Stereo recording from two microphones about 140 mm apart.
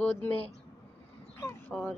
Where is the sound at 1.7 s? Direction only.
5° left (ahead or behind).